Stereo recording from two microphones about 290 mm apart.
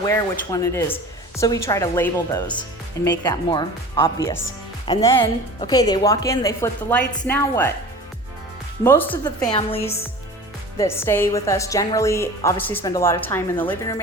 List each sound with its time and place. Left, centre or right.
0.0 s a woman's voice: centre
8.8 s a woman's voice: centre
9.6 s a woman's voice: left
10.8 s a woman's voice: centre